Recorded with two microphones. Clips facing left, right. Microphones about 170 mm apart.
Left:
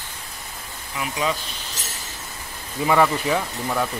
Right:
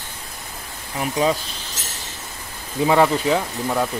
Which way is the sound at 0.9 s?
35° right (ahead or behind).